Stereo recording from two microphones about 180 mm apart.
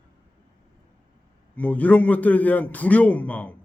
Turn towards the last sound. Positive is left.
turn(degrees=10)  # may be behind; listen again after turning